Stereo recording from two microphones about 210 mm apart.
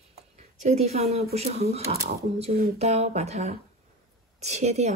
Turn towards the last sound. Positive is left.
turn(degrees=-30)  # may be behind; listen again after turning